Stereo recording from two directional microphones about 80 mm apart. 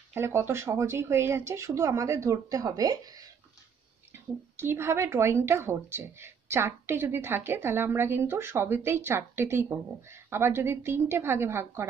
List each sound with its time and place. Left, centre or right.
0.1 s speech: right
4.1 s speech: right